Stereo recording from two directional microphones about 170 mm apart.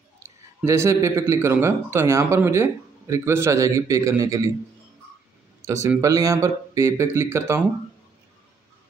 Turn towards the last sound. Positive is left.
turn(degrees=-15)  # may be behind; listen again after turning